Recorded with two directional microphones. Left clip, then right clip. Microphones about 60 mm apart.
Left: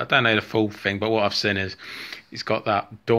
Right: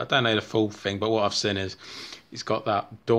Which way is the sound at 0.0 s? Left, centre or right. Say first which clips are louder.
Left 4 dB; right.